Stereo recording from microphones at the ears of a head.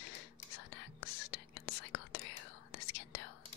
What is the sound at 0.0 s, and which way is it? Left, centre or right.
Whispering, left.